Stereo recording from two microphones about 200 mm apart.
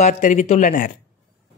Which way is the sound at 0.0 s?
40° left (ahead or behind).